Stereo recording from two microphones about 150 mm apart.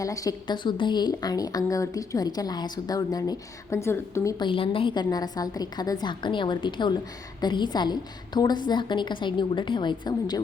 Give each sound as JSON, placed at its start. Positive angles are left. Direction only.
{"t": 0.0, "sound": "a woman's voice", "side_deg": 20}
{"t": 4.4, "sound": "a woman's voice", "side_deg": 35}